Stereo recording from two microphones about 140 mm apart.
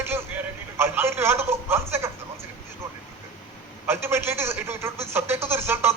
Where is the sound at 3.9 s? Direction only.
15° right (ahead or behind).